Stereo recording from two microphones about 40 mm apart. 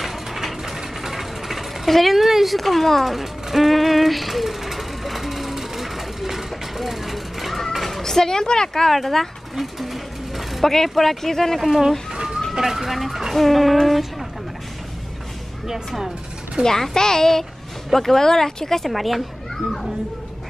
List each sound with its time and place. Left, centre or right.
0.0 s mechanisms: centre
0.7 s vehicle: centre
8.0 s speech: centre
9.8 s a sound: centre
10.7 s speech: centre
11.6 s speech: centre
12.1 s bird: centre
12.5 s speech: centre
16.6 s speech: centre
18.9 s speech: centre
19.5 s children playing: centre